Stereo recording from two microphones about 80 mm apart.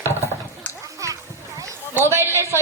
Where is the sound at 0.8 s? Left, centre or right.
Right.